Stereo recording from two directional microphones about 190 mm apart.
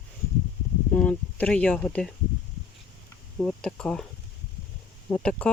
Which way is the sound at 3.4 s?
5° left (ahead or behind).